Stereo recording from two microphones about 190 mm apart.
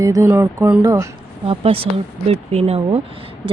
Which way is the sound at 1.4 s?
30° right (ahead or behind).